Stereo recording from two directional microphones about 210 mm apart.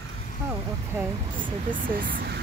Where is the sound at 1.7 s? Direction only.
40° right (ahead or behind).